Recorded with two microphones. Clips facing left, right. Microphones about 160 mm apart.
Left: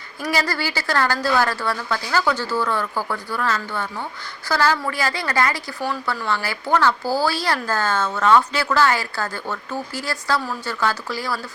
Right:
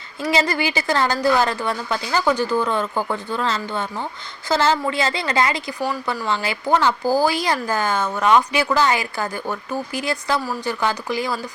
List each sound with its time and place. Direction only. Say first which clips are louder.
0.2 s a woman's voice: right 3 dB; 20° right (ahead or behind)